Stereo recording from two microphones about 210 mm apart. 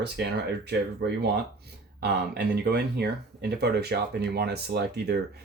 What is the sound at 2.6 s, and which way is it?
Speech, 50° right (ahead or behind).